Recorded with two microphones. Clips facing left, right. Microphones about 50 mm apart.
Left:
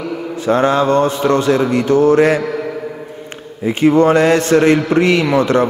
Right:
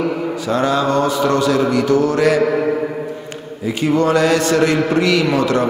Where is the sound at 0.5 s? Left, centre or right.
Left.